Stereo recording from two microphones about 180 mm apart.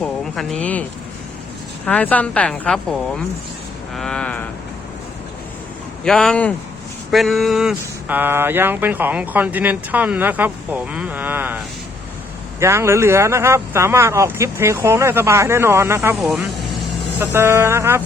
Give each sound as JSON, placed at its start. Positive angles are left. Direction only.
{"t": 0.0, "sound": "a sound", "side_deg": 0}
{"t": 1.8, "sound": "speech", "side_deg": 10}
{"t": 3.9, "sound": "a sound", "side_deg": 5}
{"t": 6.1, "sound": "speech", "side_deg": 5}
{"t": 16.0, "sound": "speech", "side_deg": 0}
{"t": 17.2, "sound": "speech", "side_deg": -15}